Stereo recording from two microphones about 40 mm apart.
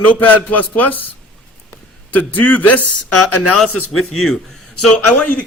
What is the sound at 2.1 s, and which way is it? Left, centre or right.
Speech, left.